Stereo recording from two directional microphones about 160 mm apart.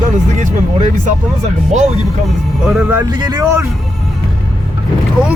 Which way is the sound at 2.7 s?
15° right (ahead or behind).